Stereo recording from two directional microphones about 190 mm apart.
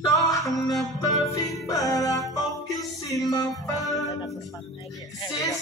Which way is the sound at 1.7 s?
20° left (ahead or behind).